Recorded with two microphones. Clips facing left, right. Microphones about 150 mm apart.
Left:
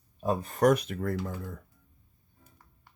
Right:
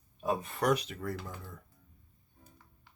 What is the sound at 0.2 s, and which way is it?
Speech, 35° left (ahead or behind).